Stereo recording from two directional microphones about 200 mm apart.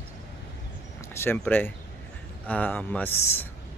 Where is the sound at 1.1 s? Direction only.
10° left (ahead or behind).